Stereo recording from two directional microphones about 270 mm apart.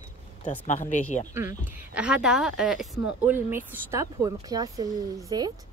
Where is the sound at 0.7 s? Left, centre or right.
Left.